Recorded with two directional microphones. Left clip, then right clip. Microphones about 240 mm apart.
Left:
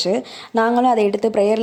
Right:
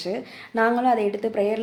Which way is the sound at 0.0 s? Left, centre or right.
Left.